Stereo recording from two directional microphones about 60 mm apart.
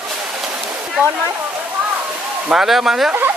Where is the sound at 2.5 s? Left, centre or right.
Centre.